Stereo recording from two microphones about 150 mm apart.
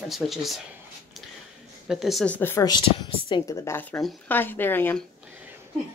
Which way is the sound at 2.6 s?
25° left (ahead or behind).